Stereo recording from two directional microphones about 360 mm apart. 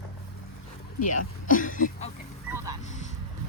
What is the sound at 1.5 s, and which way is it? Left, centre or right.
Speech, left.